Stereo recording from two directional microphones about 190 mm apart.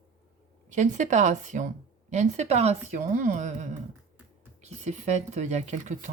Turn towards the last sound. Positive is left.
turn(degrees=-40)  # may be behind; listen again after turning